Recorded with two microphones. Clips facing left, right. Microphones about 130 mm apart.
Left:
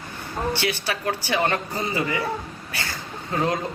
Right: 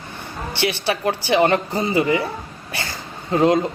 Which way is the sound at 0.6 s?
25° right (ahead or behind).